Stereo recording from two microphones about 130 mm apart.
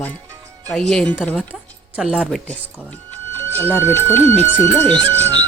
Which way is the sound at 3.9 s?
15° left (ahead or behind).